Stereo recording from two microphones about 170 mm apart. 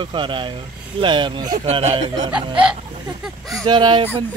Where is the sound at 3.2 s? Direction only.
Centre (ahead or behind).